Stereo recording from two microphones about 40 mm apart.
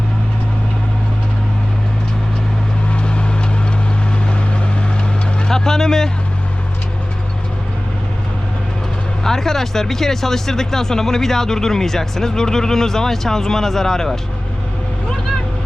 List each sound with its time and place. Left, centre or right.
2.9 s vehicle: left
5.5 s vehicle: centre
9.2 s speech: centre